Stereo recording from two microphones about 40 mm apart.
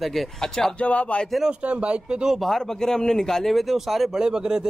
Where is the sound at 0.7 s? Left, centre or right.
Left.